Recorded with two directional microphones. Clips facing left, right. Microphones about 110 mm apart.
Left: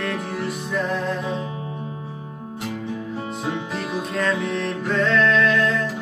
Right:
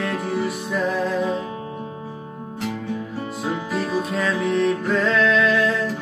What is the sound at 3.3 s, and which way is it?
Music, centre (ahead or behind).